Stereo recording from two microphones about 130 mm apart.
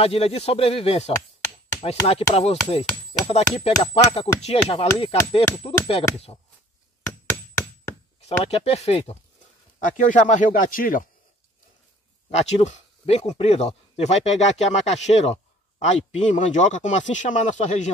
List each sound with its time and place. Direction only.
0.0 s chopping: 50° left (ahead or behind)
8.3 s chopping: 55° left (ahead or behind)
9.8 s speech: 85° left
12.3 s speech: 55° left (ahead or behind)